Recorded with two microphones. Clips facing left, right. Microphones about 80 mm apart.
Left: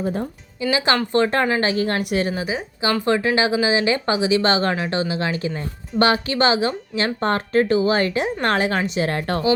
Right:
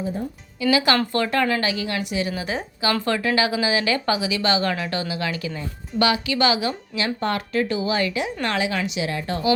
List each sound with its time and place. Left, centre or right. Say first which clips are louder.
0.0 s speech: left 3 dB; left
0.6 s speech: right 1 dB; left
1.6 s a woman's voice: left 4 dB; left
3.0 s speech: left 5 dB; left